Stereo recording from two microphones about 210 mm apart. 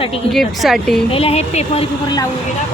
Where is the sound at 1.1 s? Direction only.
30° left (ahead or behind).